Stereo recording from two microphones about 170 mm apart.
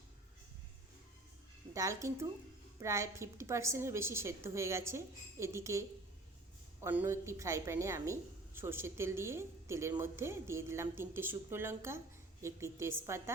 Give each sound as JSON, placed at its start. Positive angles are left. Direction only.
{"t": 1.7, "sound": "a woman's voice", "side_deg": -20}
{"t": 6.8, "sound": "a woman's voice", "side_deg": -15}